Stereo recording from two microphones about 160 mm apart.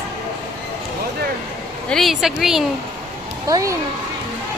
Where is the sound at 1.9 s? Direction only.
Centre (ahead or behind).